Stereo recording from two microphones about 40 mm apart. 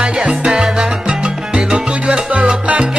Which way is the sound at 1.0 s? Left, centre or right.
Right.